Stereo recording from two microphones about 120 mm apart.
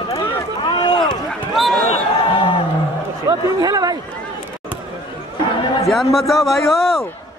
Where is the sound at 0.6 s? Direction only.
40° left (ahead or behind).